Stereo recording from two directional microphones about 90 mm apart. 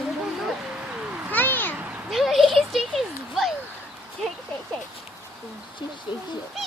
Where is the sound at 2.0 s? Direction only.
Centre (ahead or behind).